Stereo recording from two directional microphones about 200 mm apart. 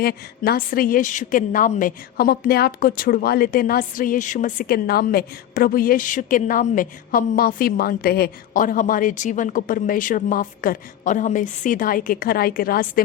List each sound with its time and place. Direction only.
0.0 s a woman's voice: 50° left (ahead or behind)